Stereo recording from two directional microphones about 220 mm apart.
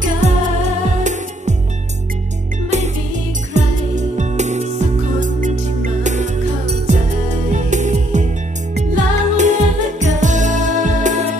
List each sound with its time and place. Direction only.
3.5 s music: 30° right (ahead or behind)
6.9 s music: 30° right (ahead or behind)